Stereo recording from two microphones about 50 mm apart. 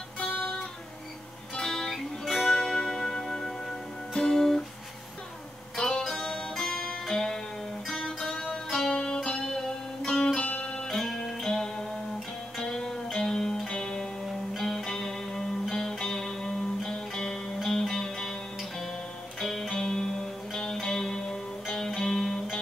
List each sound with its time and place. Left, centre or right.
0.2 s music: left
1.5 s music: centre
4.1 s guitar: centre
5.8 s music: centre
10.4 s music: left
10.9 s music: centre
14.2 s music: centre
14.6 s music: centre